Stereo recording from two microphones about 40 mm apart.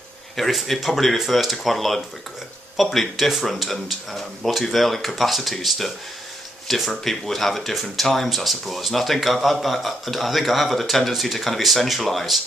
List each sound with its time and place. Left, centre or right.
0.5 s speech: centre